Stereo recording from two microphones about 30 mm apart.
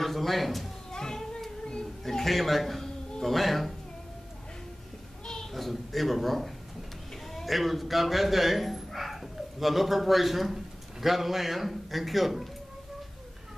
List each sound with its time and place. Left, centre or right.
0.0 s speech: centre
0.9 s children playing: left
2.0 s a man's voice: centre
5.2 s a sound: left
5.5 s a man's voice: centre